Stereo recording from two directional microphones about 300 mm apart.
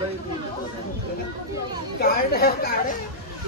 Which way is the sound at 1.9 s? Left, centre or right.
Left.